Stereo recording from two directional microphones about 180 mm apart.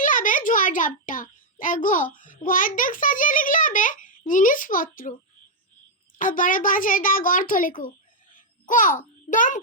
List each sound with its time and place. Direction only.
0.0 s a child's voice: 45° left (ahead or behind)
6.1 s a child's voice: 50° left (ahead or behind)